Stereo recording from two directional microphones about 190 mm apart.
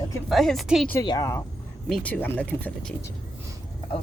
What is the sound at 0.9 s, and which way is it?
Speech, 20° left (ahead or behind).